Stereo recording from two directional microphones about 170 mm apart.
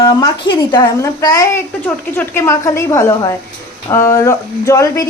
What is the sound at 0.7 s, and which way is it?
A woman's voice, 25° left (ahead or behind).